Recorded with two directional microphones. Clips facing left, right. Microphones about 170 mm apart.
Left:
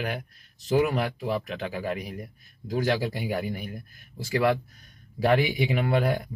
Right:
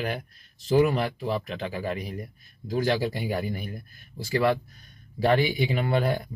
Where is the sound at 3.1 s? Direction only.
5° left (ahead or behind).